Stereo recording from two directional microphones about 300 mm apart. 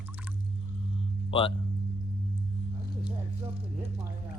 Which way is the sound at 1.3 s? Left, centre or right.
Centre.